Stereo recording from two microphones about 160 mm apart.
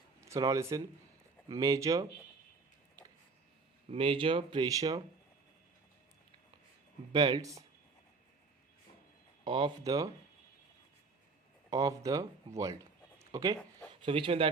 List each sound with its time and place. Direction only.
0.2 s speech: 20° right (ahead or behind)
3.8 s speech: 35° right (ahead or behind)
7.1 s speech: 30° right (ahead or behind)
9.4 s speech: 30° right (ahead or behind)
11.7 s speech: 20° right (ahead or behind)
12.5 s a sound: 20° right (ahead or behind)
14.0 s speech: 35° right (ahead or behind)